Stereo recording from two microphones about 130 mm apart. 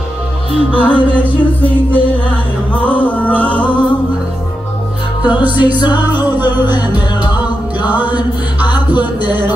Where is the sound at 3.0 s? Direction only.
10° left (ahead or behind).